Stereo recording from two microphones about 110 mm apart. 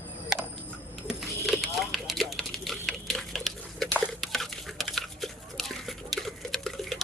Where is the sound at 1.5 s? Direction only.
Centre (ahead or behind).